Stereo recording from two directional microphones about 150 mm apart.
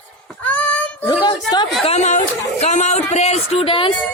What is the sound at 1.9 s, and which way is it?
Speech, 50° left (ahead or behind).